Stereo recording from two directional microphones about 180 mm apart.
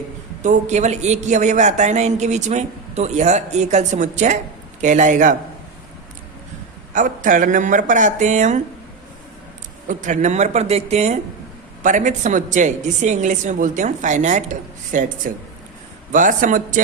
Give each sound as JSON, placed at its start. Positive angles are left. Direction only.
{"t": 0.4, "sound": "a woman's voice", "side_deg": -40}
{"t": 6.9, "sound": "a woman's voice", "side_deg": -45}
{"t": 9.8, "sound": "a woman's voice", "side_deg": -45}
{"t": 16.1, "sound": "a woman's voice", "side_deg": -45}